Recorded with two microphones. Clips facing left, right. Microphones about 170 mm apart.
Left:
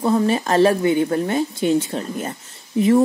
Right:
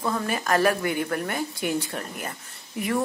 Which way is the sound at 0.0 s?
25° left (ahead or behind).